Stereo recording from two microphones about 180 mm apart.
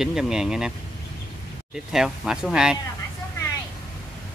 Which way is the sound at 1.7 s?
5° right (ahead or behind).